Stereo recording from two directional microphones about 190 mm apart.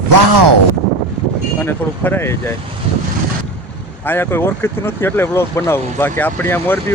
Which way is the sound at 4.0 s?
10° left (ahead or behind).